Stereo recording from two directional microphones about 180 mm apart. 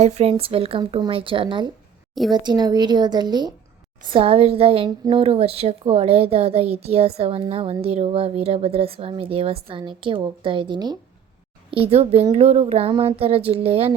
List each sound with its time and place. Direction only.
0.0 s a woman's voice: 35° right (ahead or behind)